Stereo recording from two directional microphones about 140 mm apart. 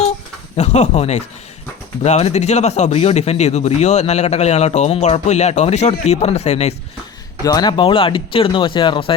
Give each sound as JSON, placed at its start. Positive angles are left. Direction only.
{"t": 0.5, "sound": "speech", "side_deg": 55}
{"t": 7.4, "sound": "speech", "side_deg": 30}